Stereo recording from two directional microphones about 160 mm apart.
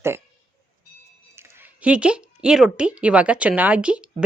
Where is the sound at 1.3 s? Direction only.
15° right (ahead or behind).